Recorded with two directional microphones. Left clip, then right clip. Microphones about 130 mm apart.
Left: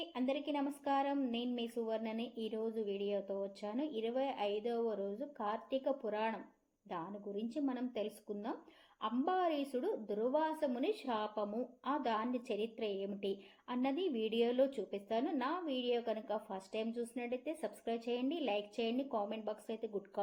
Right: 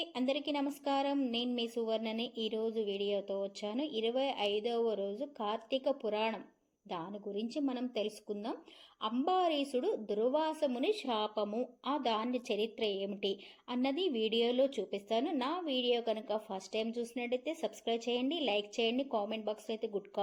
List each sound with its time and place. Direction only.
0.0 s a woman's voice: 35° right (ahead or behind)